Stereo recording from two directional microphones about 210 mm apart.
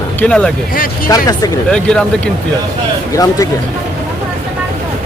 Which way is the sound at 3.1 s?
15° left (ahead or behind).